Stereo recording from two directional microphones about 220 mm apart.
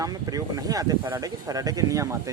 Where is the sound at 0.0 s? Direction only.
15° right (ahead or behind).